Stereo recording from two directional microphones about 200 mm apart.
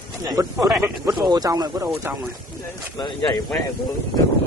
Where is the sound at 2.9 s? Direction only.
20° left (ahead or behind).